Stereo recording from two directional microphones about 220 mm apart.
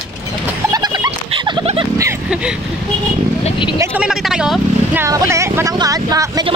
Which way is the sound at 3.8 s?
5° right (ahead or behind).